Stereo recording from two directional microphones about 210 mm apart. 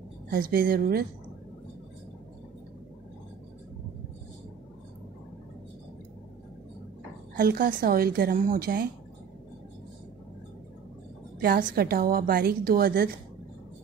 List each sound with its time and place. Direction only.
0.3 s a woman's voice: 45° right (ahead or behind)
7.3 s a woman's voice: 40° right (ahead or behind)
11.3 s a woman's voice: 45° right (ahead or behind)